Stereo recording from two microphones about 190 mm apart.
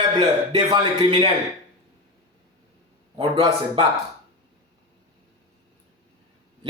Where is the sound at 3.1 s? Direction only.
20° right (ahead or behind).